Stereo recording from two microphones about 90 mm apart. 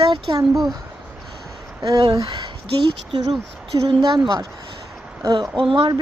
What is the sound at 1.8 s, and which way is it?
Speech, 45° right (ahead or behind).